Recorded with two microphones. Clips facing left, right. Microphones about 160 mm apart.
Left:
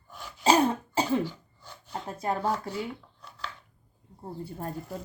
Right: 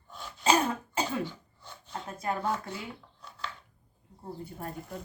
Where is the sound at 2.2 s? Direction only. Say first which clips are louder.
Left 3 dB; 30° left (ahead or behind).